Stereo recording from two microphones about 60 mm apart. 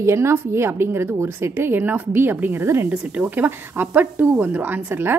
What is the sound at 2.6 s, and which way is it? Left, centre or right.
Speech, right.